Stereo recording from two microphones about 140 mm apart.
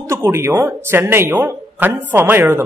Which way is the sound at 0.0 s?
20° right (ahead or behind).